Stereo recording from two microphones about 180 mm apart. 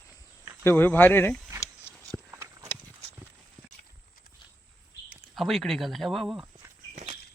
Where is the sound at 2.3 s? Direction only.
15° right (ahead or behind).